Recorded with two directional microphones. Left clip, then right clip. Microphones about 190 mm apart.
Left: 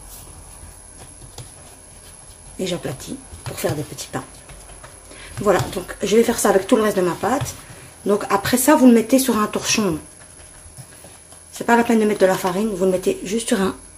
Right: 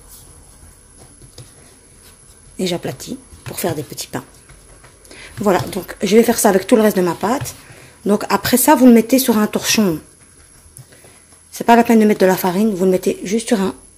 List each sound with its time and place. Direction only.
2.5 s speech: 45° right (ahead or behind)
11.5 s speech: 45° right (ahead or behind); by 13.7 s 30° right (ahead or behind)